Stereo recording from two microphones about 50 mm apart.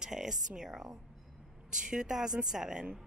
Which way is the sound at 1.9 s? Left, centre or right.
Centre.